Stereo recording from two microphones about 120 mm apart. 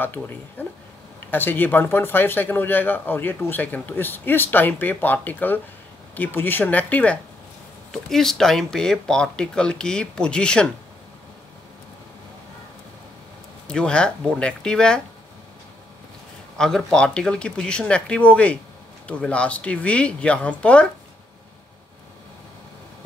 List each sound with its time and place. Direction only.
0.0 s speech: 15° left (ahead or behind)
13.7 s speech: 5° left (ahead or behind)
16.5 s speech: 5° left (ahead or behind)